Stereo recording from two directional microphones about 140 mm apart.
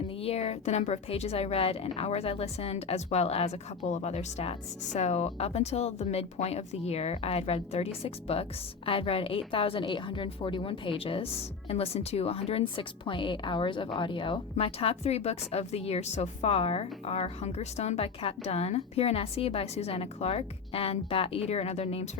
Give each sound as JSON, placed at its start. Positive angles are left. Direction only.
{"t": 0.2, "sound": "a woman's voice", "side_deg": 45}